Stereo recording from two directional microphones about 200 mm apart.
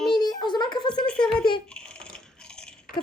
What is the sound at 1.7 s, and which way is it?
Coin, 5° left (ahead or behind).